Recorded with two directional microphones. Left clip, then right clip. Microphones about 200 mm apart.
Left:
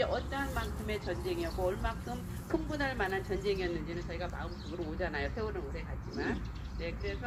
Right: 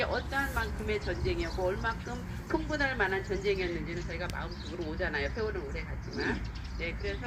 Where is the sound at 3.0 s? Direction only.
30° left (ahead or behind).